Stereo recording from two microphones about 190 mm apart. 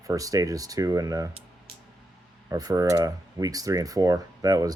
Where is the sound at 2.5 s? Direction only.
20° right (ahead or behind).